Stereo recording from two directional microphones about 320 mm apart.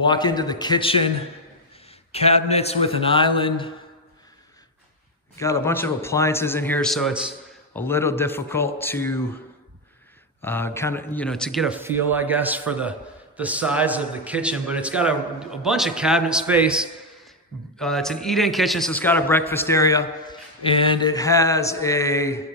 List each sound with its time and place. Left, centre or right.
0.0 s a man's voice: centre
2.1 s a man's voice: centre
5.4 s a man's voice: centre
10.4 s a man's voice: centre